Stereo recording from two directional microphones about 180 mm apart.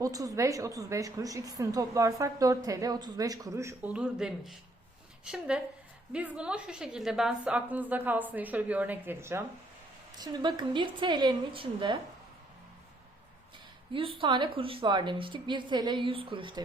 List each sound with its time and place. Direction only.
0.0 s a woman's voice: 20° right (ahead or behind)
10.2 s a woman's voice: 25° right (ahead or behind)
13.9 s a woman's voice: 30° right (ahead or behind)